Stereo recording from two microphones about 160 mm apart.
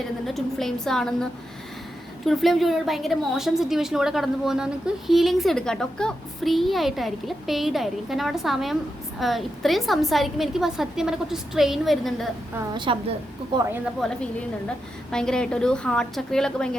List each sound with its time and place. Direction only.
0.3 s a woman's voice: centre (ahead or behind)
12.7 s a woman's voice: 30° right (ahead or behind)
14.0 s a woman's voice: 5° left (ahead or behind)